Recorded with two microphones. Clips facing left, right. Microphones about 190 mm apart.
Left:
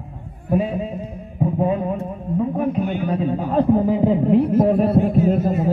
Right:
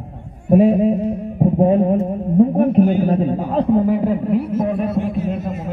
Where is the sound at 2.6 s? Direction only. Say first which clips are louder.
Right 7 dB; 55° right (ahead or behind).